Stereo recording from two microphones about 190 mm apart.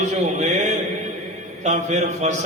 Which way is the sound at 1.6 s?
40° right (ahead or behind).